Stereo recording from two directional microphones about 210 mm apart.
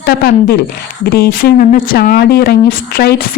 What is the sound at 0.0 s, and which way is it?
Speech, 45° left (ahead or behind).